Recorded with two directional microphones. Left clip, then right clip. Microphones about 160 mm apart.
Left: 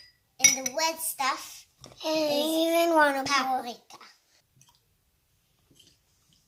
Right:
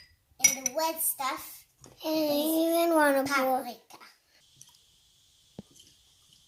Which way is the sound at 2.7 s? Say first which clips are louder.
Left 2 dB; 45° right (ahead or behind).